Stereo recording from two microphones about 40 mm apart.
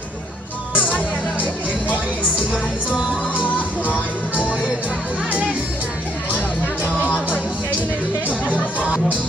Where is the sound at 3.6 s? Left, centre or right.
Left.